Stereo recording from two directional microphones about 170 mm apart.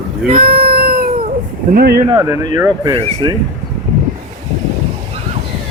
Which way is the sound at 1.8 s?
60° right (ahead or behind).